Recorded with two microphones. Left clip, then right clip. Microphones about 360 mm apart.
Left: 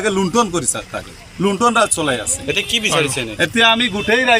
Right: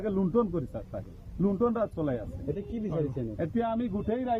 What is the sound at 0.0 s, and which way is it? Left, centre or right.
A man's voice, right.